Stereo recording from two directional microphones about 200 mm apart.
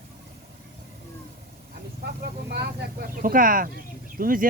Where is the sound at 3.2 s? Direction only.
45° right (ahead or behind).